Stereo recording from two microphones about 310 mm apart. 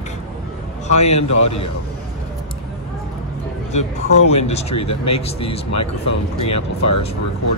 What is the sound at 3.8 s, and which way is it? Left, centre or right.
Speech, left.